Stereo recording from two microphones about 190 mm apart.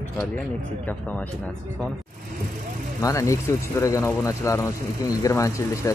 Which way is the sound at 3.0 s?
15° left (ahead or behind).